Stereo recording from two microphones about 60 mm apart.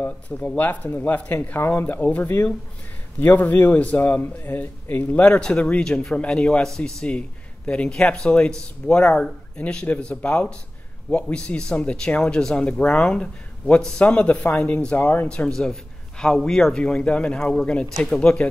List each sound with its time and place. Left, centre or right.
0.0 s a man's voice: left
5.4 s a man's voice: centre
15.2 s a man's voice: centre
16.8 s speech: centre
17.9 s speech: centre
18.2 s speech: centre